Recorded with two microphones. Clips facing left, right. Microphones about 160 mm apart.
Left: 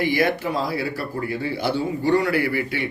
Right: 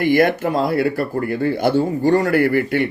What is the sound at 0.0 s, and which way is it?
Speech, 50° right (ahead or behind).